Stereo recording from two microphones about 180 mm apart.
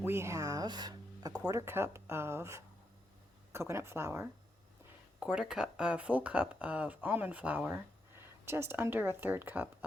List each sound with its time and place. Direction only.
0.0 s speech: 15° right (ahead or behind)